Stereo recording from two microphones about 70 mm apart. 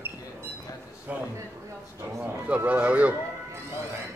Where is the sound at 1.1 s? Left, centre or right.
Right.